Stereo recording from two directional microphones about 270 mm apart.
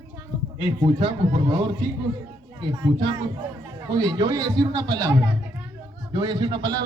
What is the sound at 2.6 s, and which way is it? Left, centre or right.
A man's voice, centre.